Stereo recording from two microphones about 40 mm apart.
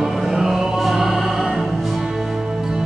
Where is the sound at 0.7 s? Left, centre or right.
Centre.